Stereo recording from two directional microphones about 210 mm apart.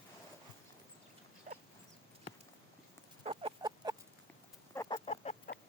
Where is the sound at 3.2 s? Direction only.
25° right (ahead or behind).